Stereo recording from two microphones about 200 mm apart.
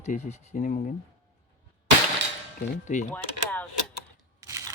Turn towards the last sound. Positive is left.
turn(degrees=-15)  # may be behind; listen again after turning